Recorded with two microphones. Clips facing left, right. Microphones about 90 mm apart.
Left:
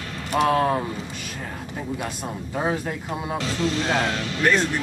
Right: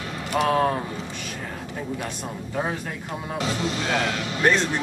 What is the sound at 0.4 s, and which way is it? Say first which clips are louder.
Speech: left 1 dB; 5° left (ahead or behind).